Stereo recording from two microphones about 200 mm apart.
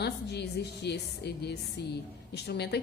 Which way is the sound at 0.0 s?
55° left (ahead or behind).